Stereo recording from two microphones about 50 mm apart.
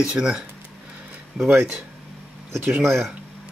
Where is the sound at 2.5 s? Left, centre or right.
Right.